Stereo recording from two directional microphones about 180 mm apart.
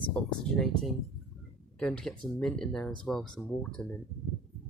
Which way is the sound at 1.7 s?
5° left (ahead or behind).